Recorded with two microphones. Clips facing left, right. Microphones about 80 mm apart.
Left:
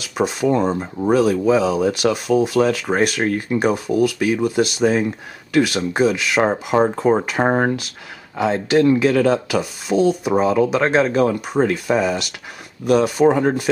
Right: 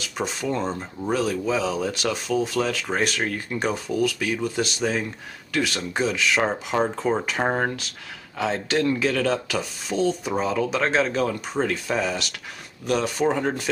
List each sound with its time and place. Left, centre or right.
0.0 s speech: centre
8.4 s speech: centre